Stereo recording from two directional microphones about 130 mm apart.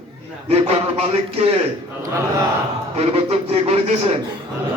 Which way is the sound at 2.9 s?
50° right (ahead or behind).